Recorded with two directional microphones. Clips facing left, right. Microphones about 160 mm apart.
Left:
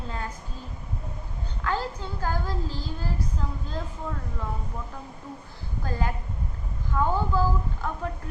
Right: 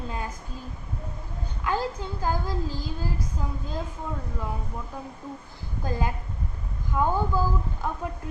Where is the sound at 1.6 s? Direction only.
15° right (ahead or behind).